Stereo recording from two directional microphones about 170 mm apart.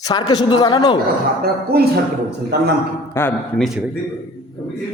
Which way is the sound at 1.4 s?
70° right (ahead or behind).